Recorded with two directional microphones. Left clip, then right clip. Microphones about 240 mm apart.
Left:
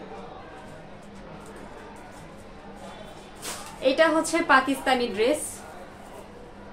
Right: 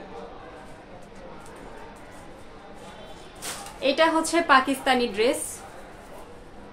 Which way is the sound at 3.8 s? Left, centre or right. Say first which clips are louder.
Even; right.